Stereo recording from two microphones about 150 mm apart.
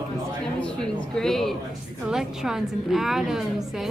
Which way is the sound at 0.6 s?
5° left (ahead or behind).